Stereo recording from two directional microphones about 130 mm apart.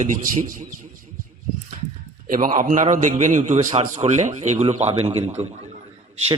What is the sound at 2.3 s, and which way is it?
A man's voice, 90° right.